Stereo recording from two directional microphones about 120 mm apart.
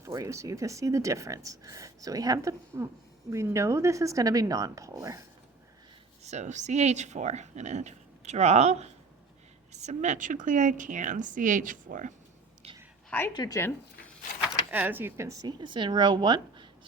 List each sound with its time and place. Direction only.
0.0 s speech: 25° right (ahead or behind)
6.2 s speech: 75° right (ahead or behind)
9.7 s a woman's voice: 75° right (ahead or behind)
12.6 s a sound: 55° right (ahead or behind)
13.1 s a woman's voice: 15° left (ahead or behind)
13.3 s speech: 35° left (ahead or behind)
13.6 s speech: 20° left (ahead or behind)
14.4 s speech: 15° right (ahead or behind)
15.6 s a woman's voice: 40° right (ahead or behind)